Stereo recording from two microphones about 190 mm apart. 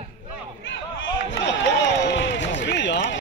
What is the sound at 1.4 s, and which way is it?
Run, 70° left (ahead or behind).